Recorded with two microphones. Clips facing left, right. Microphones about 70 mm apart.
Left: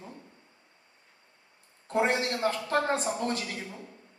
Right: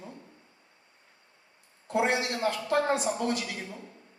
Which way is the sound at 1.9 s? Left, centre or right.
Left.